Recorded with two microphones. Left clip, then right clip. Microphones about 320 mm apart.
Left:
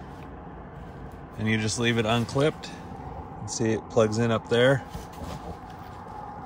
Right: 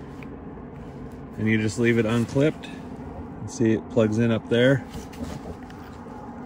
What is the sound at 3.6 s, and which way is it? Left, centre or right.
Speech, left.